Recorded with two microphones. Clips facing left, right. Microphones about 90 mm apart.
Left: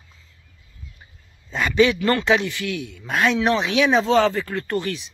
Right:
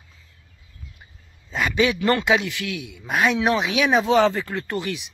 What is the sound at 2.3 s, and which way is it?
Speech, centre (ahead or behind).